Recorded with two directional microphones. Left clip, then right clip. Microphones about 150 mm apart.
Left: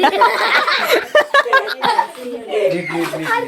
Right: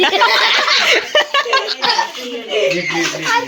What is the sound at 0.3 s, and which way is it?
Speech, 90° left.